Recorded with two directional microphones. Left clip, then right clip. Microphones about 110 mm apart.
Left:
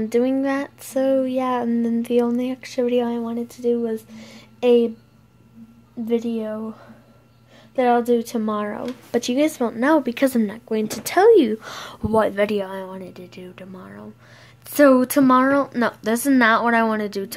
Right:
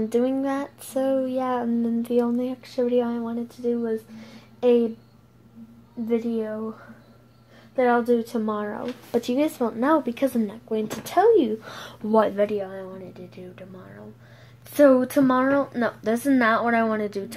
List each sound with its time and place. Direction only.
0.0 s speech: 15° left (ahead or behind)
6.0 s speech: 20° left (ahead or behind)
9.9 s speech: 25° left (ahead or behind)
10.2 s speech: 35° left (ahead or behind)
11.6 s speech: 15° left (ahead or behind)
12.5 s speech: 70° left (ahead or behind)
13.3 s speech: 30° left (ahead or behind); by 17.4 s 15° left (ahead or behind)